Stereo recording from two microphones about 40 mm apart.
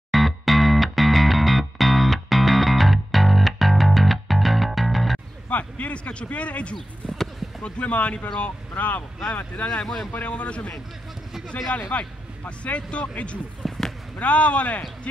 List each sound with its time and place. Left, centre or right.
0.1 s music: centre
5.5 s speech: left
9.7 s speech: centre
10.2 s speech: left
11.9 s speech: left
13.7 s basketball bounce: centre
14.1 s speech: left